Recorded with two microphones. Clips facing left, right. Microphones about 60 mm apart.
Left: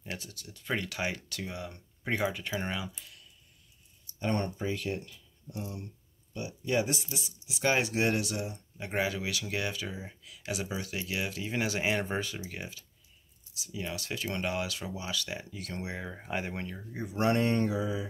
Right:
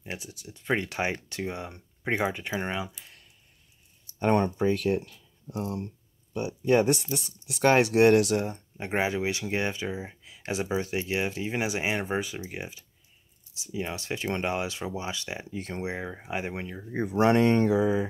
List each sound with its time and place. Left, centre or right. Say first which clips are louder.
0.0 s speech: right 3 dB; centre
4.2 s speech: right 8 dB; right
6.3 s speech: right 7 dB; right
16.2 s speech: right 2 dB; centre
16.9 s speech: right 6 dB; right